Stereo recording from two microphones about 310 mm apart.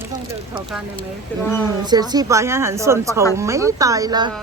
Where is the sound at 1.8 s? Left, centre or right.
Centre.